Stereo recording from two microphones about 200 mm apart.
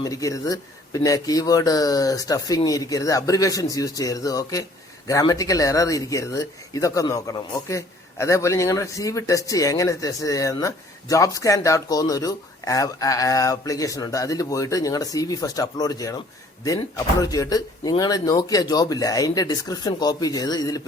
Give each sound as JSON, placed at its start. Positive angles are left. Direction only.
{"t": 0.0, "sound": "speech", "side_deg": 15}